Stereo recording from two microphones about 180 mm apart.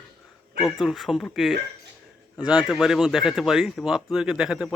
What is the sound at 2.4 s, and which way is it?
Speech, 20° left (ahead or behind).